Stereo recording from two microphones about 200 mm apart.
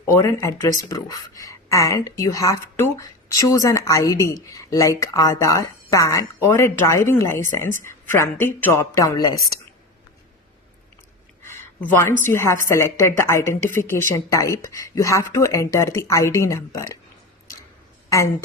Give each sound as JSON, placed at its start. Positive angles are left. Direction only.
{"t": 0.1, "sound": "speech", "side_deg": 15}
{"t": 11.5, "sound": "a woman's voice", "side_deg": 10}
{"t": 18.1, "sound": "speech", "side_deg": 15}